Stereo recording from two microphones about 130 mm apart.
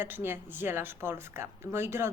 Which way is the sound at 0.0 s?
15° right (ahead or behind).